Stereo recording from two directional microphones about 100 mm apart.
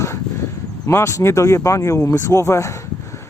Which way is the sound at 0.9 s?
30° left (ahead or behind).